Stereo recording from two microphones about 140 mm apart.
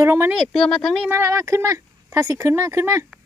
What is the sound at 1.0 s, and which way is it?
Speech, 15° right (ahead or behind).